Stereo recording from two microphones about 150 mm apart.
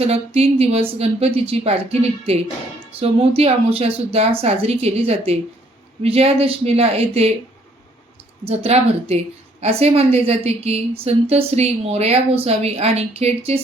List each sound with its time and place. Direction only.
0.0 s a woman's voice: 45° right (ahead or behind)
8.4 s a woman's voice: 45° right (ahead or behind)